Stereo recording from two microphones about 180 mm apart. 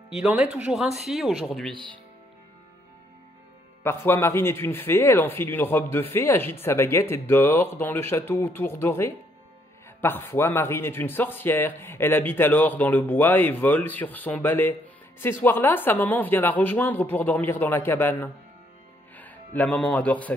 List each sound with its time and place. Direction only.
0.1 s speech: 5° right (ahead or behind)
1.7 s speech: 25° right (ahead or behind)
3.8 s speech: 15° left (ahead or behind)